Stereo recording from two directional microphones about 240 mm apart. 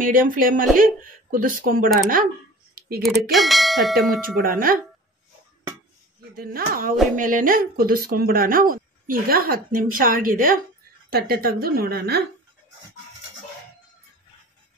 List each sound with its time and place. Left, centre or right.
0.0 s speech: right
3.3 s speech: centre
4.1 s speech: right
6.3 s speech: right